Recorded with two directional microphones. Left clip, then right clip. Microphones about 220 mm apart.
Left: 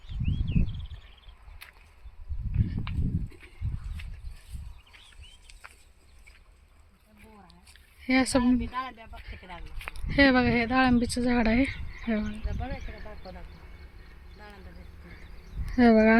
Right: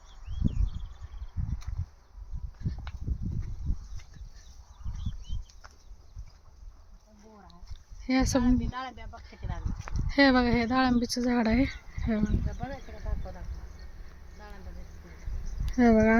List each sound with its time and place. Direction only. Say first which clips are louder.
8.0 s speech: left 2 dB; 5° left (ahead or behind)
10.1 s speech: left 1 dB; centre (ahead or behind)
12.5 s speech: left 1 dB; 40° left (ahead or behind)
15.7 s speech: left 2 dB; 10° left (ahead or behind)